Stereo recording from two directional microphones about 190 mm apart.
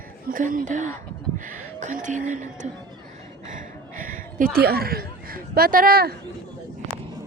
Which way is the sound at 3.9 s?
45° right (ahead or behind).